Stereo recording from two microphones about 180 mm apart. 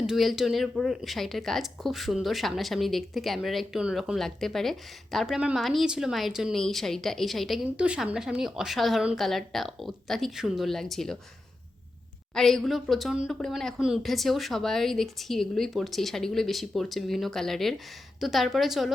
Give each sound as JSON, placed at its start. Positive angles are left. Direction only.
{"t": 0.1, "sound": "speech", "side_deg": 0}
{"t": 12.3, "sound": "speech", "side_deg": 0}